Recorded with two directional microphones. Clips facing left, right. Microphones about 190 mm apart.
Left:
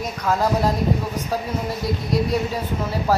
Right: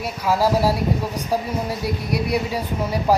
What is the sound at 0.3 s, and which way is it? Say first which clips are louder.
Speech: right 2 dB; 5° right (ahead or behind).